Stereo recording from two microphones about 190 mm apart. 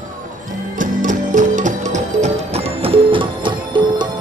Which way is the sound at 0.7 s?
45° right (ahead or behind).